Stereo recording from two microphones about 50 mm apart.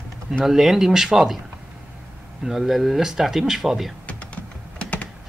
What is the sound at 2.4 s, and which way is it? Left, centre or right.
Speech, centre.